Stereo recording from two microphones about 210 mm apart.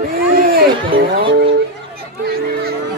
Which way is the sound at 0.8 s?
25° right (ahead or behind).